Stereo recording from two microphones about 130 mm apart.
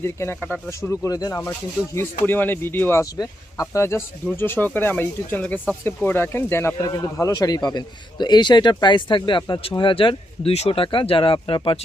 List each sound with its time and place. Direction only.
0.0 s a man's voice: 20° left (ahead or behind); by 11.8 s 40° left (ahead or behind)